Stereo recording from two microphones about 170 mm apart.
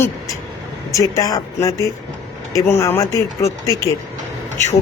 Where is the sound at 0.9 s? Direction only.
20° left (ahead or behind).